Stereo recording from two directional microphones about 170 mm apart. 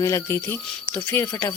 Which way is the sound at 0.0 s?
15° left (ahead or behind).